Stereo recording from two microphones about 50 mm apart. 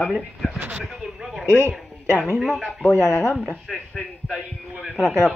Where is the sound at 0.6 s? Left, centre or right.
Right.